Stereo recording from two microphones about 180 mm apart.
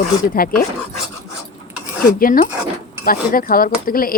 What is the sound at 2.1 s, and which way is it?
Speech, 50° left (ahead or behind).